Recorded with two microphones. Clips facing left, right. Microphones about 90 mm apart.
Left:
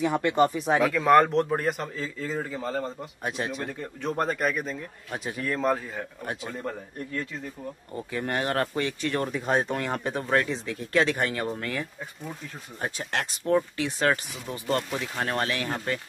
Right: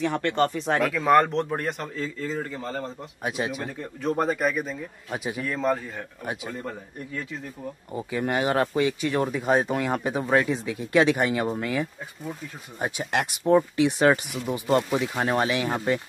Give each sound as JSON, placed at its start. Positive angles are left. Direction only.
{"t": 0.0, "sound": "speech", "side_deg": 10}